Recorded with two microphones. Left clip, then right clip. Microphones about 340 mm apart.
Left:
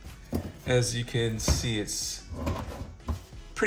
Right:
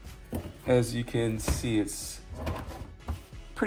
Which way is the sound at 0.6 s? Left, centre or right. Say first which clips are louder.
Right 2 dB; centre.